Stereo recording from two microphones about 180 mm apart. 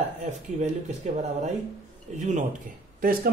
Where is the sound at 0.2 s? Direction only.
40° right (ahead or behind).